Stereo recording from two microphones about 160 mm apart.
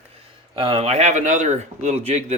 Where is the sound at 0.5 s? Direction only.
35° right (ahead or behind).